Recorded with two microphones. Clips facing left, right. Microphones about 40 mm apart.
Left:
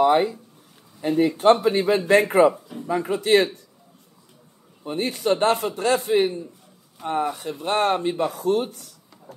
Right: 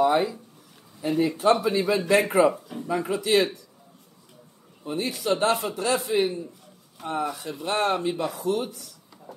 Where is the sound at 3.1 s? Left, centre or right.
Left.